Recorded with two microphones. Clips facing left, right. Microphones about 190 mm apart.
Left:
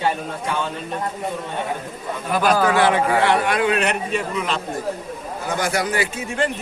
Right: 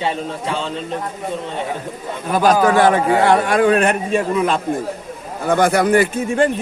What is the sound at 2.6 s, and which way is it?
A man's voice, 45° right (ahead or behind).